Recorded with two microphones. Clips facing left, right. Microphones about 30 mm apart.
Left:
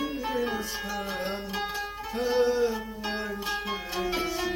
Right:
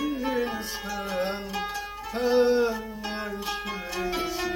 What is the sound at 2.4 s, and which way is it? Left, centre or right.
Music, right.